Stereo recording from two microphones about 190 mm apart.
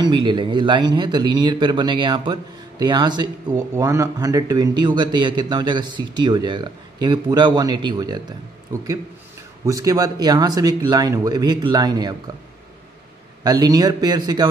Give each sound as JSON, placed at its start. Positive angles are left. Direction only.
{"t": 0.0, "sound": "speech", "side_deg": -25}
{"t": 9.7, "sound": "speech", "side_deg": -20}
{"t": 13.4, "sound": "speech", "side_deg": -20}